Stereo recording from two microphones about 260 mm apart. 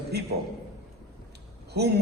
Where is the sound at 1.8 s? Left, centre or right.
Right.